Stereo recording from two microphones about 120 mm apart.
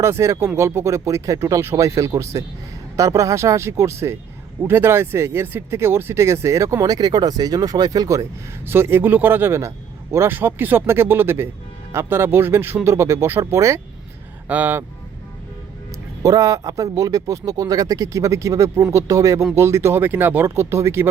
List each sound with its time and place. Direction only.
0.0 s speech: 25° right (ahead or behind)
16.2 s speech: 30° right (ahead or behind)